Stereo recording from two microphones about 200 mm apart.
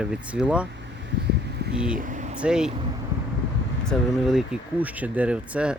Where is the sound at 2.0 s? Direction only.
40° right (ahead or behind).